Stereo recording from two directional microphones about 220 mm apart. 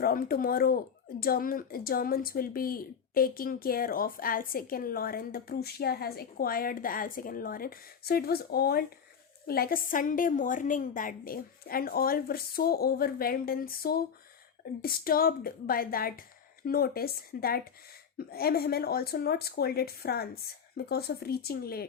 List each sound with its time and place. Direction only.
0.0 s speech: 40° left (ahead or behind)